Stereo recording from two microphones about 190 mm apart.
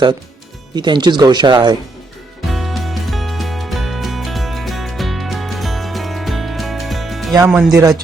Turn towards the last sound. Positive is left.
turn(degrees=0)  # may be behind; listen again after turning